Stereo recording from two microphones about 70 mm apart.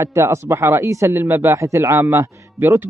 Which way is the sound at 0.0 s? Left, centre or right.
Right.